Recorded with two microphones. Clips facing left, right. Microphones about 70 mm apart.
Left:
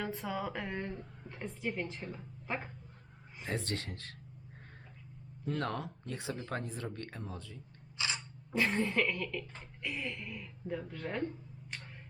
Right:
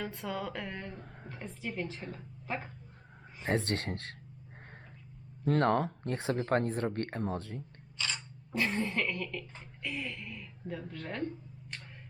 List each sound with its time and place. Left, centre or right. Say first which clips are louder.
0.0 s a woman's voice: even; centre
3.4 s speech: right 6 dB; right
5.5 s speech: right 9 dB; right
7.9 s a sound: even; centre
8.5 s speech: left 1 dB; centre